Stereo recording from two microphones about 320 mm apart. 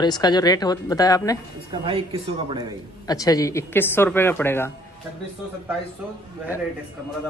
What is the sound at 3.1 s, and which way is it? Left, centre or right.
A woman's voice, centre.